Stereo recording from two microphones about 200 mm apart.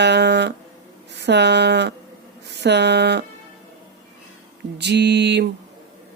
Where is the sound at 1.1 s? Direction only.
60° right (ahead or behind).